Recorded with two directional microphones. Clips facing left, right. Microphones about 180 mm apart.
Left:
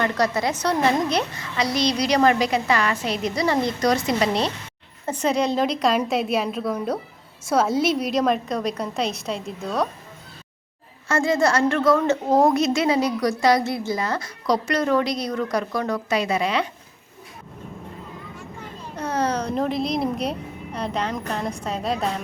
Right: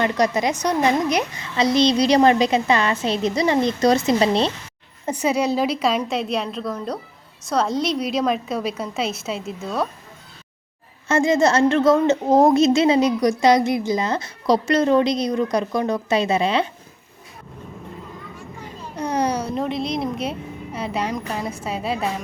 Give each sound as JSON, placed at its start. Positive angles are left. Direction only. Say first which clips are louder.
{"t": 0.0, "sound": "a woman's voice", "louder": "right 2 dB", "side_deg": -20}
{"t": 5.0, "sound": "a woman's voice", "louder": "right 1 dB", "side_deg": -10}
{"t": 11.1, "sound": "a woman's voice", "louder": "right 3 dB", "side_deg": -20}
{"t": 18.9, "sound": "a child's voice", "louder": "right 2 dB", "side_deg": -15}